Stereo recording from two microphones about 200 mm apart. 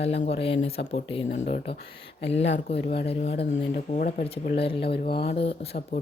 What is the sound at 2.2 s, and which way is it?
Speech, 60° left (ahead or behind).